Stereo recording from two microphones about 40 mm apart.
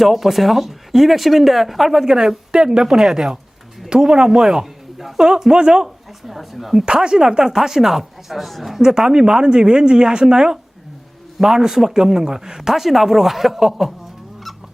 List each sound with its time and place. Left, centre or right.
0.0 s speech: centre
2.0 s speech: centre
6.2 s speech: centre
6.8 s speech: centre
8.8 s a woman's voice: centre